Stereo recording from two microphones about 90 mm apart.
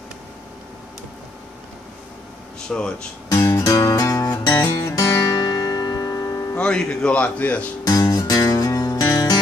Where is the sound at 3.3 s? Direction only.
35° left (ahead or behind).